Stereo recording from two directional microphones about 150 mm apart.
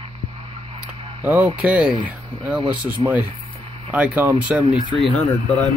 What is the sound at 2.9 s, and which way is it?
Speech, 10° right (ahead or behind).